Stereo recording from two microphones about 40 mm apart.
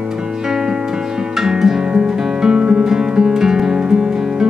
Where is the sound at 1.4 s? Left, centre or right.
Centre.